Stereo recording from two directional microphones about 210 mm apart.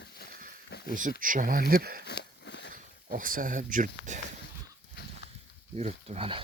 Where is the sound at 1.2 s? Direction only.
40° right (ahead or behind).